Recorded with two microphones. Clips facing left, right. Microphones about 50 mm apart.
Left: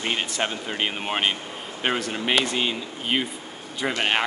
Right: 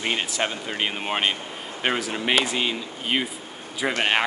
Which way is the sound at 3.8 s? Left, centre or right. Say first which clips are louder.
Right 1 dB; centre.